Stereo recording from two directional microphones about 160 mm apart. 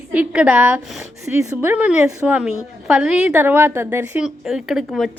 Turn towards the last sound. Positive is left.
turn(degrees=0)  # may be behind; listen again after turning